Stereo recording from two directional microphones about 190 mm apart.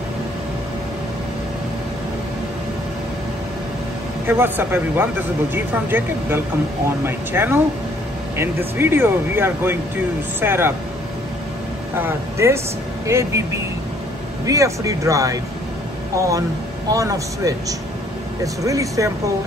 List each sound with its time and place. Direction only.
4.3 s speech: 10° right (ahead or behind)
12.0 s speech: 15° right (ahead or behind)